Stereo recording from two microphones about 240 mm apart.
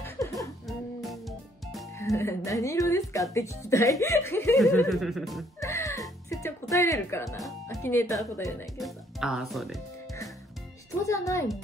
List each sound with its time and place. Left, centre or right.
0.0 s music: centre
2.0 s speech: centre
4.8 s music: centre
5.6 s music: centre
7.2 s music: centre
7.6 s speech: centre
8.7 s speech: centre
11.0 s speech: centre